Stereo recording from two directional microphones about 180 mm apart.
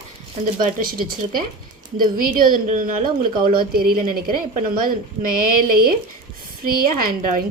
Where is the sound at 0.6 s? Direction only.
55° right (ahead or behind).